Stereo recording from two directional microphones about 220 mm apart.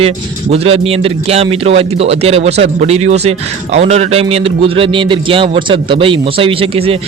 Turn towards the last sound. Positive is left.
turn(degrees=-25)  # may be behind; listen again after turning